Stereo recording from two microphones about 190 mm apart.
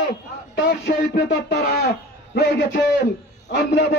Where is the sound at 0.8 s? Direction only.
60° left (ahead or behind).